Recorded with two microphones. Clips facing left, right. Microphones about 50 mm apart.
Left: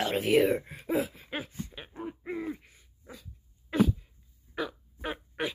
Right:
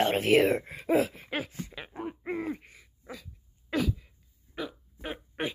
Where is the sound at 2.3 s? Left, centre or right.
Right.